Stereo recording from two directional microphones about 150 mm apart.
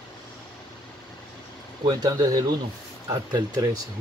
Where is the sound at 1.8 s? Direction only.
25° right (ahead or behind).